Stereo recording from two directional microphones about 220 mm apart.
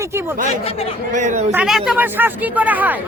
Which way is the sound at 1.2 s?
35° right (ahead or behind).